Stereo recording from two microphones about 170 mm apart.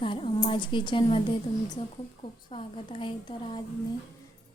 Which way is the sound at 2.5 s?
35° left (ahead or behind).